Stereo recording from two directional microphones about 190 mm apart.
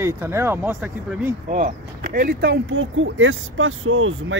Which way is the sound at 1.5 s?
45° right (ahead or behind).